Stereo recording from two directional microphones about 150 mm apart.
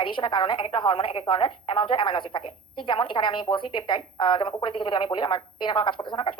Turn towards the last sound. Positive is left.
turn(degrees=30)  # may be behind; listen again after turning